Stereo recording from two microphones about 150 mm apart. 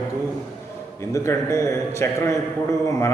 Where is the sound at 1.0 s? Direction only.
20° left (ahead or behind).